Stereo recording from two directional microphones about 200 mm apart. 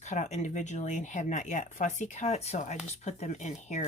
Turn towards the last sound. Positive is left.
turn(degrees=35)  # may be behind; listen again after turning